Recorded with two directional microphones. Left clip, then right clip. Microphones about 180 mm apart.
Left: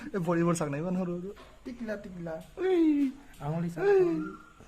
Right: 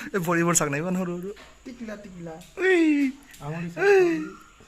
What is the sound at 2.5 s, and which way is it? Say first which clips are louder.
Speech: right 6 dB; 10° right (ahead or behind).